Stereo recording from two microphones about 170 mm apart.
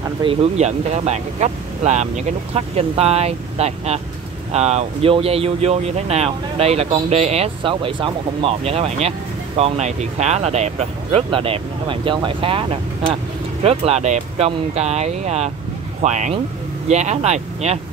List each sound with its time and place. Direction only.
0.2 s speech: 35° right (ahead or behind)